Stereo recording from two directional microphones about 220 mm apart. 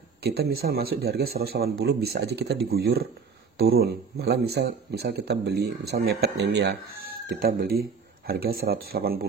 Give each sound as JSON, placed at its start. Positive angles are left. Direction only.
{"t": 0.2, "sound": "speech", "side_deg": -45}